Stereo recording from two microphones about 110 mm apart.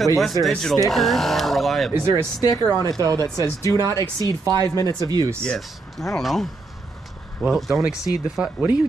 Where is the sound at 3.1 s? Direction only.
35° left (ahead or behind).